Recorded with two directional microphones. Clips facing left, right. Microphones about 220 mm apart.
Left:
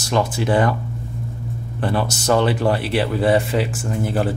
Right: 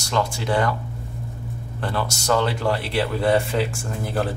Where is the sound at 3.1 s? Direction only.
Centre (ahead or behind).